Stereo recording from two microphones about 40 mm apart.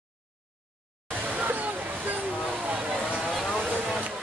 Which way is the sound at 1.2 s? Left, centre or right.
Right.